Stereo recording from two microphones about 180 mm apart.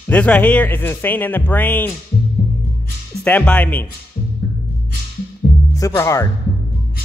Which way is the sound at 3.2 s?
5° left (ahead or behind).